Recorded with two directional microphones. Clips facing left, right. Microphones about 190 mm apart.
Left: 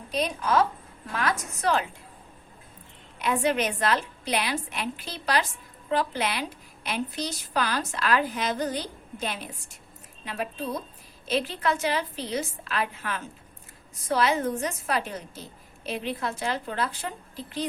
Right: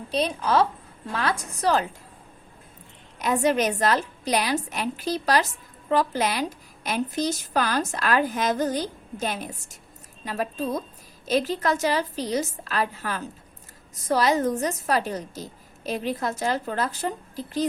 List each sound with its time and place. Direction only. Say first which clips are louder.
0.1 s a woman's voice: right 2 dB; 30° right (ahead or behind)
3.2 s a woman's voice: right 3 dB; 40° right (ahead or behind)